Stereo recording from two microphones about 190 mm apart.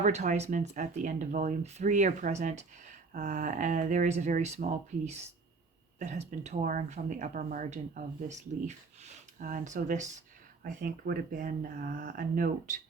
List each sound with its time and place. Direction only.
0.0 s speech: 40° right (ahead or behind)
6.0 s speech: 40° right (ahead or behind)